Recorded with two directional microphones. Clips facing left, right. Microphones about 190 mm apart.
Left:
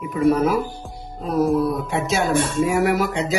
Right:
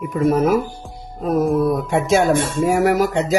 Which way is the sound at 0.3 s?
45° right (ahead or behind).